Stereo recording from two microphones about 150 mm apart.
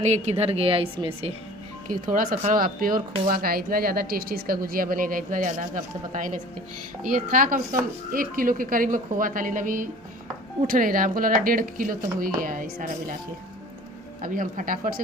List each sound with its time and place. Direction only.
0.0 s a woman's voice: 50° right (ahead or behind)
1.9 s speech: 65° right (ahead or behind)
14.2 s speech: 65° right (ahead or behind)